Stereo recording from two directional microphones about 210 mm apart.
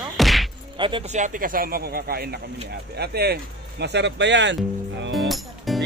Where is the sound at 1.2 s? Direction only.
40° right (ahead or behind); by 4.5 s 55° right (ahead or behind).